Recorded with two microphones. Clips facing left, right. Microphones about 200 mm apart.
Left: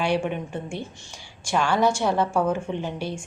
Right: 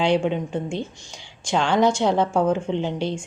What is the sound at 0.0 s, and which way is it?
A woman's voice, 20° right (ahead or behind).